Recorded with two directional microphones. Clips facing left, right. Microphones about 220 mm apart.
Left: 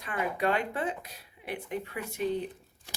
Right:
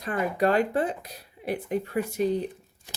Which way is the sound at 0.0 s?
40° right (ahead or behind).